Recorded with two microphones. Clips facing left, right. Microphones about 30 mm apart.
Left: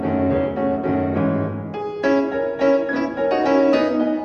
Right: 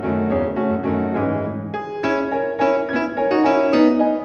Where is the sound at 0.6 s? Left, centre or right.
Right.